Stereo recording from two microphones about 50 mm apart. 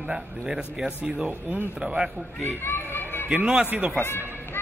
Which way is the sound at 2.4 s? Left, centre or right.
Left.